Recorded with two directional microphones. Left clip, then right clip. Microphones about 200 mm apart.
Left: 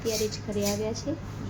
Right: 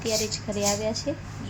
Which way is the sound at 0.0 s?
40° right (ahead or behind).